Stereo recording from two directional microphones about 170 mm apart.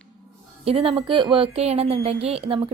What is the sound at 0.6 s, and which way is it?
A woman's voice, 35° right (ahead or behind).